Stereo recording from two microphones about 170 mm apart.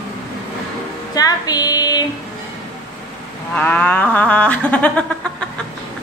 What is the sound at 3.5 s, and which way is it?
A woman's voice, 10° left (ahead or behind).